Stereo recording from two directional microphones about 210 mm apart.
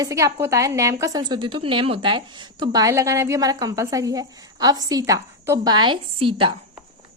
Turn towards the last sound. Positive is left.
turn(degrees=-25)  # may be behind; listen again after turning